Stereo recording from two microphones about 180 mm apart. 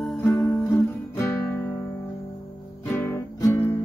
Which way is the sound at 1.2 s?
15° left (ahead or behind).